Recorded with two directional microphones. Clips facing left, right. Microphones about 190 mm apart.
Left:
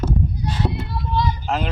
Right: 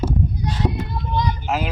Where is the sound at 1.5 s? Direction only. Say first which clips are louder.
Even; 5° right (ahead or behind).